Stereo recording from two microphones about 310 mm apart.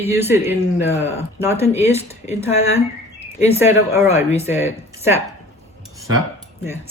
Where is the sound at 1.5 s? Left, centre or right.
Left.